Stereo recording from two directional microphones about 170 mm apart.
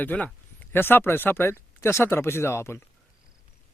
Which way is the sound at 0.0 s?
10° left (ahead or behind).